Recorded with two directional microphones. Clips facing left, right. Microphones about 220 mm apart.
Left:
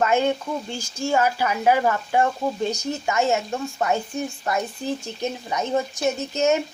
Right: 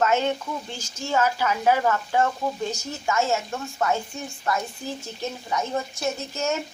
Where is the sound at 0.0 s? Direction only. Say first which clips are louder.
Left 2 dB; 10° left (ahead or behind).